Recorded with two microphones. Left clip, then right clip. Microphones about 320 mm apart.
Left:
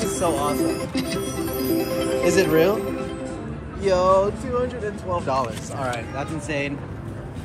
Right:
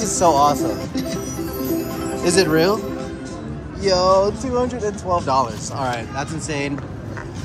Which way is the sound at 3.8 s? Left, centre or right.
Centre.